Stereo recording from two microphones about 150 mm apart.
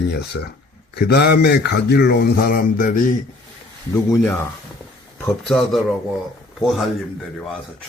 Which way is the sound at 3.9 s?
15° left (ahead or behind).